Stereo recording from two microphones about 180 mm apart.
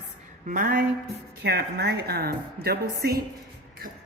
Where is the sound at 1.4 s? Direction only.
65° right (ahead or behind).